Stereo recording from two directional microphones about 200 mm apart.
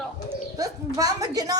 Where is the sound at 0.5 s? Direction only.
15° right (ahead or behind).